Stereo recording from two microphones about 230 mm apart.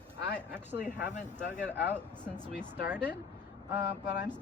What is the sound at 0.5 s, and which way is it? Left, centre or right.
Speech, centre.